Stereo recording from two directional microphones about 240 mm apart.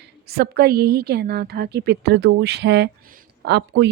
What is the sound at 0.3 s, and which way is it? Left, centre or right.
Speech, right.